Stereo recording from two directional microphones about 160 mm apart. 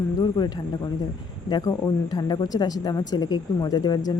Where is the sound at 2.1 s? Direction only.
25° left (ahead or behind).